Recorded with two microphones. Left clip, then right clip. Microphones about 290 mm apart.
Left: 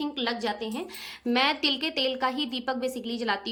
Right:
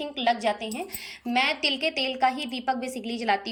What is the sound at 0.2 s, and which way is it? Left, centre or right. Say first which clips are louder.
A woman's voice: right 7 dB; centre.